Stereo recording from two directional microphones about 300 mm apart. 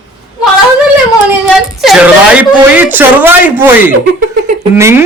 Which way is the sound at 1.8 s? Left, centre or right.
Centre.